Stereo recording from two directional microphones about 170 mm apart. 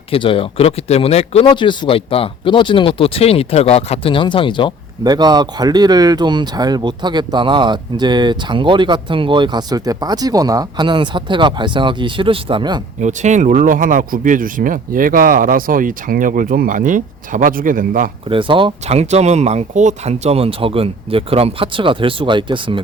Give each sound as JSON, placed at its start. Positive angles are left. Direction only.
{"t": 0.1, "sound": "speech", "side_deg": 30}
{"t": 5.0, "sound": "speech", "side_deg": -25}
{"t": 13.0, "sound": "speech", "side_deg": -45}
{"t": 18.3, "sound": "speech", "side_deg": -30}